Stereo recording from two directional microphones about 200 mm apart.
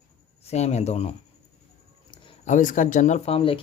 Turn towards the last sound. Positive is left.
turn(degrees=25)  # may be behind; listen again after turning